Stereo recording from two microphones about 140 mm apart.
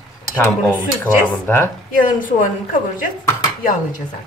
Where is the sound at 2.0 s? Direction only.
75° left (ahead or behind).